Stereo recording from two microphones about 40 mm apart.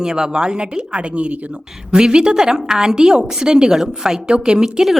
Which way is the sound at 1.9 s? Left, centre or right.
Right.